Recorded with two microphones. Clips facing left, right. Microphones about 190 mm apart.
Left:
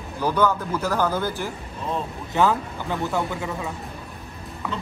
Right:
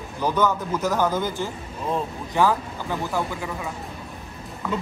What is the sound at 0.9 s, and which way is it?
Speech, 15° right (ahead or behind).